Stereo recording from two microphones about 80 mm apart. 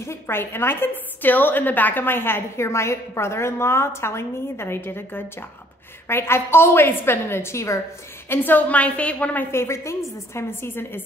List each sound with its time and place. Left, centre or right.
0.0 s a woman's voice: left
8.3 s a woman's voice: left
9.5 s a woman's voice: left